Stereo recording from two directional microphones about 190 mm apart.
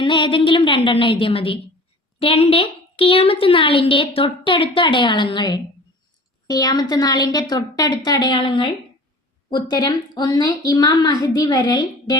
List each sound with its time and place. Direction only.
0.0 s a woman's voice: 25° left (ahead or behind)